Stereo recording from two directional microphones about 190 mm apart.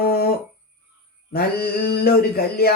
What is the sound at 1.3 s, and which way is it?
Speech, 55° left (ahead or behind).